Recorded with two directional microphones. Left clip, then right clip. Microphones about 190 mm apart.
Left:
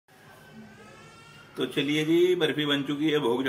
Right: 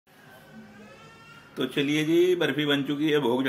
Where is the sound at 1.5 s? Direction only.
15° right (ahead or behind).